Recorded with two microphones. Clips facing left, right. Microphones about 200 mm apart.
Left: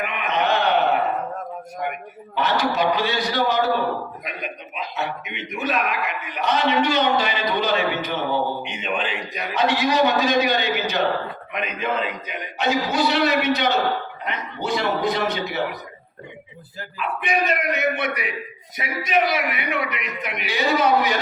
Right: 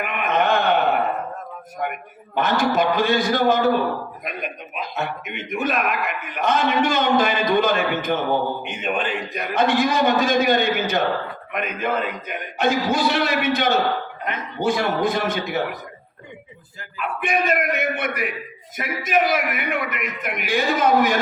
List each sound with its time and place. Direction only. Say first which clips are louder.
0.0 s a sound: right 2 dB; 50° right (ahead or behind)
1.8 s a man's voice: right 2 dB; 50° right (ahead or behind)
17.0 s a man's voice: right 1 dB; 50° right (ahead or behind)